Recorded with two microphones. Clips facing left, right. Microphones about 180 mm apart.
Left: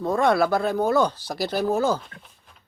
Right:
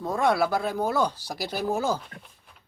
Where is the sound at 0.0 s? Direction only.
10° right (ahead or behind).